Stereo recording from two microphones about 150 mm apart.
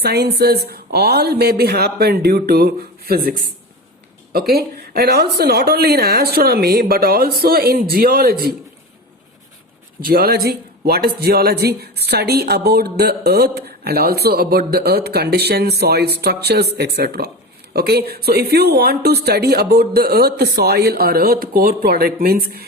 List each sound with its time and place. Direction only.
0.0 s speech: 90° right
10.0 s speech: 90° right